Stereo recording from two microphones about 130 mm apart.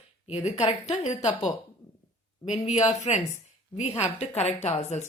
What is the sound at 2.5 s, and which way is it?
Speech, 60° left (ahead or behind).